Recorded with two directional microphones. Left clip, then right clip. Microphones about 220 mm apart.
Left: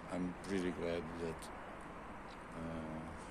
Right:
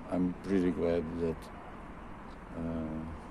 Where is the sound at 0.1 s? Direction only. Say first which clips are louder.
Right 9 dB; 20° right (ahead or behind).